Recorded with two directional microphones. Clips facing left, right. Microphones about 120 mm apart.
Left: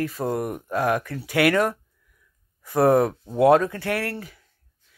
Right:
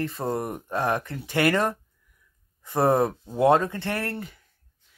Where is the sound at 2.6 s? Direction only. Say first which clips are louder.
Left 3 dB; 15° right (ahead or behind).